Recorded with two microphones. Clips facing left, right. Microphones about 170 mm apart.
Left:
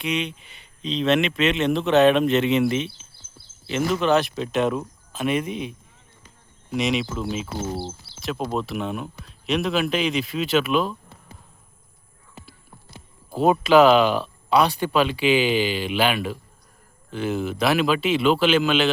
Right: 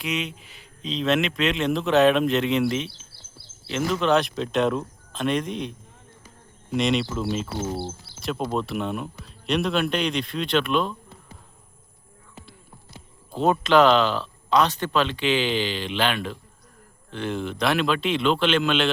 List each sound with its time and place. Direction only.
0.0 s a man's voice: centre (ahead or behind)
3.1 s a sound: 75° right (ahead or behind)
3.7 s a man's voice: centre (ahead or behind)
13.3 s a man's voice: 10° left (ahead or behind)